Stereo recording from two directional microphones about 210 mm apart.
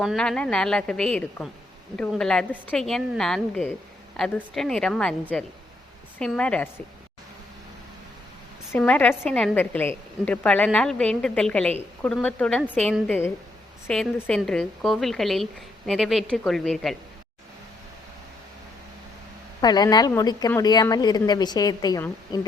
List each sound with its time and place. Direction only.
0.0 s a woman's voice: centre (ahead or behind)
6.1 s a woman's voice: 5° left (ahead or behind)
8.7 s a woman's voice: 10° left (ahead or behind)
19.6 s a woman's voice: 20° left (ahead or behind)